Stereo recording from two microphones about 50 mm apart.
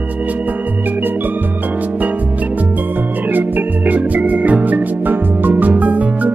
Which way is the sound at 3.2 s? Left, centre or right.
Right.